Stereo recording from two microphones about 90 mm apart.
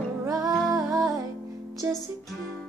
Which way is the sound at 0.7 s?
40° right (ahead or behind).